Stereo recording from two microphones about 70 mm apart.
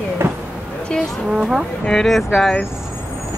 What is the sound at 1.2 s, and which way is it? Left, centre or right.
Speech, centre.